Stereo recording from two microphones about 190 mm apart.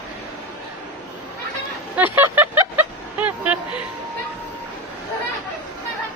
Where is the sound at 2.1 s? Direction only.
10° right (ahead or behind).